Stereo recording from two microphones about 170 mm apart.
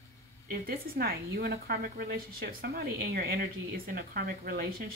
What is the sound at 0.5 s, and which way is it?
A woman's voice, 60° right (ahead or behind).